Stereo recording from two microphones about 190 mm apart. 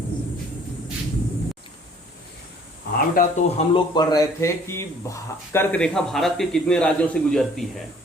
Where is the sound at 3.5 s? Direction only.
25° left (ahead or behind).